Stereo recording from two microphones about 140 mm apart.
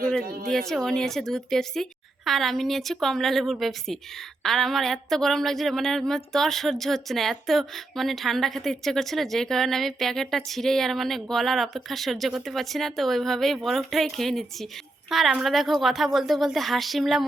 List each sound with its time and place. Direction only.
0.2 s speech: 90° right
0.7 s speech: 5° left (ahead or behind)